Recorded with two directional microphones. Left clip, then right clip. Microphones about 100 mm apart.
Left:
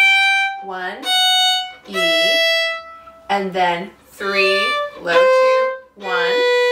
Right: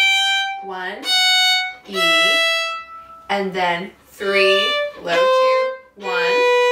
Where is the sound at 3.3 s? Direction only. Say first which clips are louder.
Left 2 dB; 10° left (ahead or behind).